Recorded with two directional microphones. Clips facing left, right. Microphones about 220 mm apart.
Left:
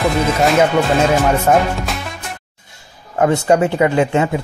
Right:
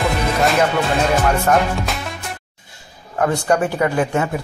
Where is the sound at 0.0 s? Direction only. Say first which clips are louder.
Left 3 dB; centre (ahead or behind).